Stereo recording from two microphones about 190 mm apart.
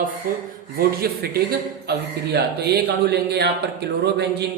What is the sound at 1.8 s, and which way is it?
A man's voice, 60° right (ahead or behind).